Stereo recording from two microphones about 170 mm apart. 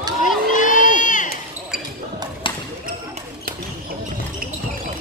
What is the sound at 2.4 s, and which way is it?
Basketball bounce, 30° left (ahead or behind).